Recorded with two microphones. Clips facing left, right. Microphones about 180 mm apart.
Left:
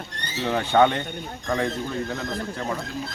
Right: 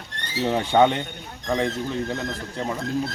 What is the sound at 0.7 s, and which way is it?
Speech, 15° right (ahead or behind).